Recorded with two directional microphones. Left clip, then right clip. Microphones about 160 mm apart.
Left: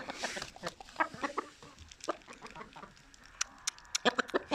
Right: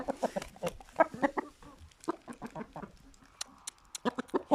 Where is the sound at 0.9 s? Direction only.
60° right (ahead or behind).